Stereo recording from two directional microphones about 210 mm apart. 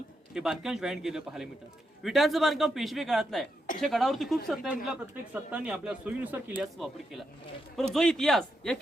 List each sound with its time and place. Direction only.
0.3 s speech: centre (ahead or behind)